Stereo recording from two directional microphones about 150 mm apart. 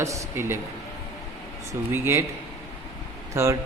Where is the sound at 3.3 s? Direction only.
20° right (ahead or behind).